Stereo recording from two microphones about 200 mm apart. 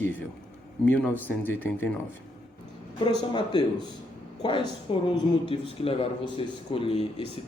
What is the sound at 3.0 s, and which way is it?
A man's voice, 20° left (ahead or behind).